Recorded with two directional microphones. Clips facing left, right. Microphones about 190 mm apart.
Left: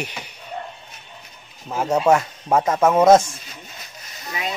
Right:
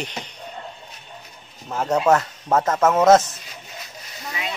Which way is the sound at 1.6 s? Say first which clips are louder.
Left 1 dB; 10° left (ahead or behind).